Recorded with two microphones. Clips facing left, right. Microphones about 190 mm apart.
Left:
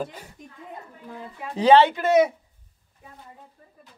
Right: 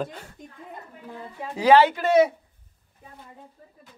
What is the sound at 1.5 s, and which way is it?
Speech, 25° left (ahead or behind).